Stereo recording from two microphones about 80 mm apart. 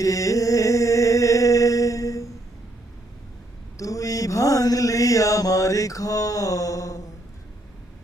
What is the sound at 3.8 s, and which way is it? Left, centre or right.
Mantra, left.